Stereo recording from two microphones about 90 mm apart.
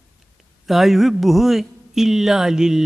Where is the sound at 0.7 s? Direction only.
5° right (ahead or behind).